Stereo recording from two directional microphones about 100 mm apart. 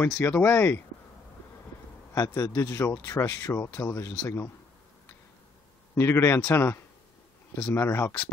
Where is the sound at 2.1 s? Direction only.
35° left (ahead or behind).